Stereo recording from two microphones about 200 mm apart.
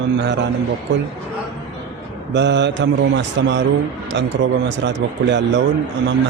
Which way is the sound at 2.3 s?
60° right (ahead or behind).